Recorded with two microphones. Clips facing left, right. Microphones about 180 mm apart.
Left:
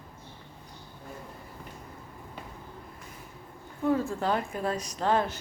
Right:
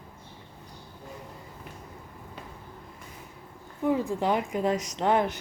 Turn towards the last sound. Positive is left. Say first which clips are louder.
# right 2 dB
turn(degrees=-15)  # may be behind; listen again after turning